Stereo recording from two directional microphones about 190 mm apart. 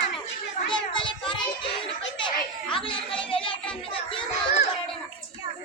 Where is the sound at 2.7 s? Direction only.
25° left (ahead or behind).